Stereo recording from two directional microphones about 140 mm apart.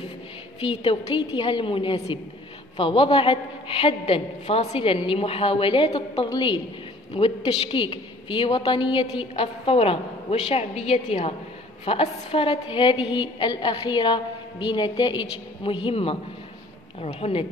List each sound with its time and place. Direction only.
0.6 s a woman's voice: 40° left (ahead or behind)
6.2 s a woman's voice: 30° left (ahead or behind)
7.2 s a woman's voice: 45° left (ahead or behind)